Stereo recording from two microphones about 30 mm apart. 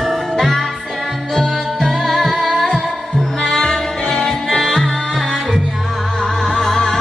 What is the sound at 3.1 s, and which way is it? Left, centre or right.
Music, centre.